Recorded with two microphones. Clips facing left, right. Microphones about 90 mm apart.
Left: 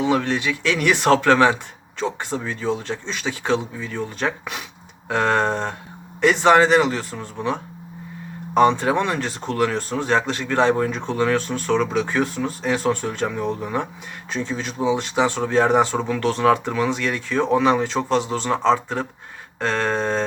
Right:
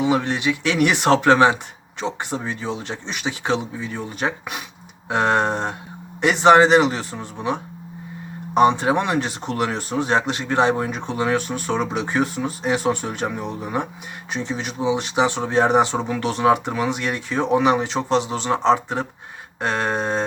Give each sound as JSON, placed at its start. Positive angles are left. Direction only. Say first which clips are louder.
{"t": 0.0, "sound": "speech", "louder": "even", "side_deg": -15}